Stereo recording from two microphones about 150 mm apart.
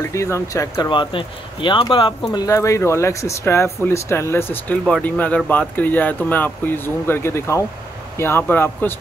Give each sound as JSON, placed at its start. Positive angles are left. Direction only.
{"t": 0.0, "sound": "speech", "side_deg": 20}
{"t": 2.3, "sound": "speech", "side_deg": 20}